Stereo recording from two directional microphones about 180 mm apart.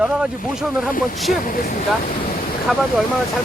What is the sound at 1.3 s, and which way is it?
Speech, 50° left (ahead or behind).